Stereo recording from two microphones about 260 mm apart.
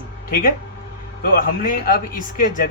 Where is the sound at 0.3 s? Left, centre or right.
Left.